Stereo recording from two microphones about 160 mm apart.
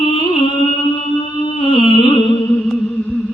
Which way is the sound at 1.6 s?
35° left (ahead or behind).